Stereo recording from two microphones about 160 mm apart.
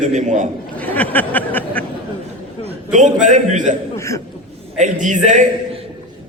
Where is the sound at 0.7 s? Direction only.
10° left (ahead or behind).